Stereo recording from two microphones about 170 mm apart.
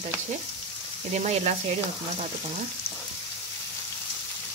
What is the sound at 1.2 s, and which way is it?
Speech, 40° right (ahead or behind).